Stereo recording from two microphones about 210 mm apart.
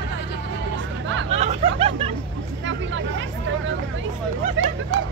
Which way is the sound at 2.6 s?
65° right (ahead or behind).